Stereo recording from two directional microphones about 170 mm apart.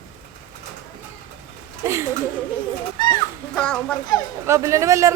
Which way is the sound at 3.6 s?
5° left (ahead or behind).